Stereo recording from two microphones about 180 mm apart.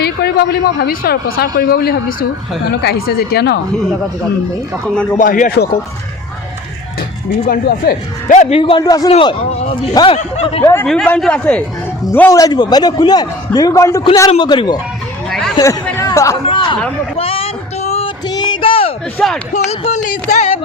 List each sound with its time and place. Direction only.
0.0 s a man's voice: 65° left (ahead or behind)
5.1 s speech: 50° left (ahead or behind)
7.4 s a man's voice: 50° left (ahead or behind); by 8.8 s 30° left (ahead or behind)
8.8 s a man's voice: 20° left (ahead or behind)
9.1 s speech: 35° left (ahead or behind)
9.9 s a man's voice: 25° left (ahead or behind)
10.2 s a man's voice: 40° left (ahead or behind)
10.6 s a man's voice: 15° left (ahead or behind)
15.3 s chatter: centre (ahead or behind)
16.0 s a sound: 15° left (ahead or behind)
16.5 s a man's voice: 30° left (ahead or behind)
17.2 s a sound: 30° left (ahead or behind)
19.2 s speech: centre (ahead or behind)
19.8 s a man's voice: 40° left (ahead or behind)